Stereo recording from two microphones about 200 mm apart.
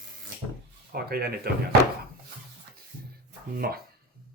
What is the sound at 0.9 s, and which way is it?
Speech, 50° right (ahead or behind).